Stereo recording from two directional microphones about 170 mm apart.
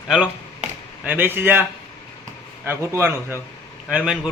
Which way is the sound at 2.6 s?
15° right (ahead or behind).